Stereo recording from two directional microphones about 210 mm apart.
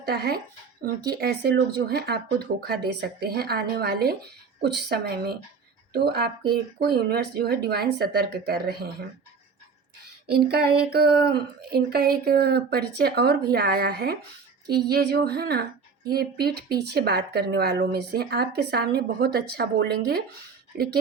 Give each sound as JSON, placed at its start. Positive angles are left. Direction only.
{"t": 0.1, "sound": "speech", "side_deg": -50}
{"t": 10.5, "sound": "speech", "side_deg": -50}